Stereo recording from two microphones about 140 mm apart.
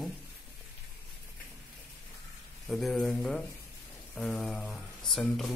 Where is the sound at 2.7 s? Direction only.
Centre (ahead or behind).